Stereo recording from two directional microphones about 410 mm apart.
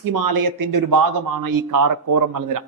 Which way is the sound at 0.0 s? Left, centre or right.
Right.